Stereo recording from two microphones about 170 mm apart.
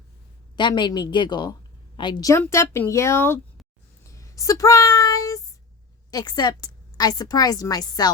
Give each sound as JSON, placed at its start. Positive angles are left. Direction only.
{"t": 0.5, "sound": "a woman's voice", "side_deg": 25}
{"t": 4.0, "sound": "child singing", "side_deg": 20}
{"t": 6.1, "sound": "a woman's voice", "side_deg": 25}